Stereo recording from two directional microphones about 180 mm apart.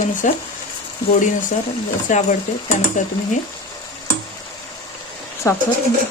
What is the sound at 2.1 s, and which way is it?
Speech, 45° left (ahead or behind).